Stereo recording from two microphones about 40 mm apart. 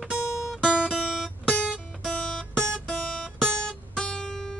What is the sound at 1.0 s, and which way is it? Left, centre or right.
Music, centre.